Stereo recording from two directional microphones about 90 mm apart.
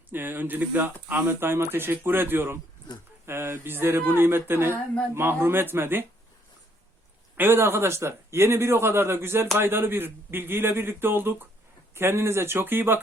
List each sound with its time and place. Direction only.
0.1 s speech: 20° right (ahead or behind)
7.3 s speech: 25° right (ahead or behind)